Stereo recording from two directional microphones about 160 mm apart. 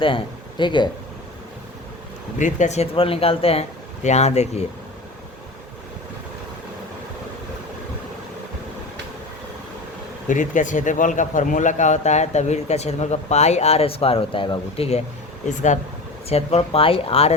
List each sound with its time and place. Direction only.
0.0 s speech: 30° left (ahead or behind)
2.4 s speech: 50° left (ahead or behind)
10.2 s a man's voice: 50° left (ahead or behind)